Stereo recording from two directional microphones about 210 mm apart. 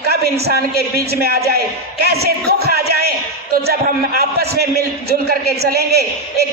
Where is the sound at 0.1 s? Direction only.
50° right (ahead or behind).